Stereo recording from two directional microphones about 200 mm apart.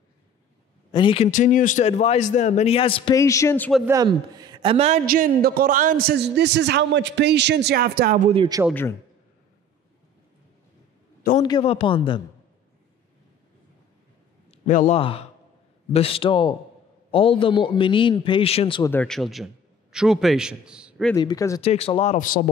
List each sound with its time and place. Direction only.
0.9 s a man's voice: 25° left (ahead or behind)
3.2 s speech: 15° left (ahead or behind)
3.8 s a man's voice: 20° right (ahead or behind)
5.0 s a man's voice: 45° right (ahead or behind)
8.3 s a man's voice: 20° right (ahead or behind)
11.4 s a man's voice: 25° left (ahead or behind)
14.5 s a sound: 35° left (ahead or behind)
15.0 s a man's voice: 30° left (ahead or behind)
18.9 s a man's voice: 5° left (ahead or behind)
21.1 s speech: 20° left (ahead or behind)
21.5 s a man's voice: 30° left (ahead or behind)